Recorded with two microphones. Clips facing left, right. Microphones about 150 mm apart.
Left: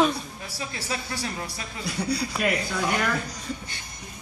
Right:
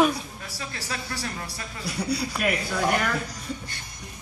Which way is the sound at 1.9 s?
5° right (ahead or behind).